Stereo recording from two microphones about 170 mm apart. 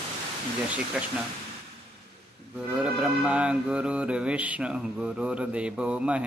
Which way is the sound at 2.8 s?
5° right (ahead or behind).